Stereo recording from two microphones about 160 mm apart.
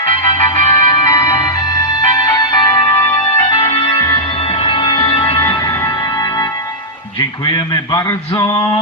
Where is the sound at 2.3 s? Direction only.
30° left (ahead or behind).